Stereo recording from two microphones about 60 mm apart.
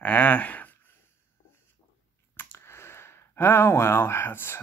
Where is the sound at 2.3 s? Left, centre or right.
Left.